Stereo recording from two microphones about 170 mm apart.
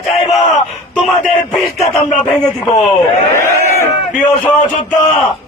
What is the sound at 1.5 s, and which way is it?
Speech, 20° left (ahead or behind).